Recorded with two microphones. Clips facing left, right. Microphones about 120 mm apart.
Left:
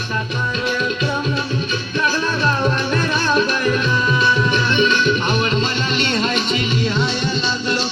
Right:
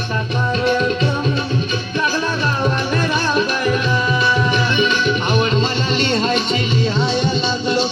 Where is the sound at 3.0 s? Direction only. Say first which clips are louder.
Even; 15° right (ahead or behind).